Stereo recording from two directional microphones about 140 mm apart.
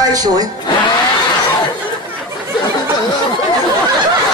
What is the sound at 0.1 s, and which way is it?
Speech, 25° right (ahead or behind).